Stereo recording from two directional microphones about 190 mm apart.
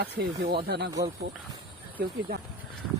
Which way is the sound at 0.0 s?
55° right (ahead or behind).